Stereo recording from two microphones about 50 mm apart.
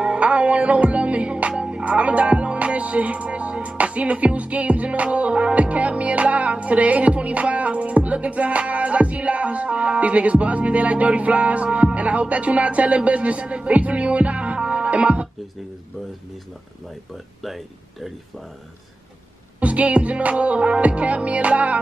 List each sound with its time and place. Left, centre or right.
0.0 s music: right
17.4 s speech: centre
19.6 s music: right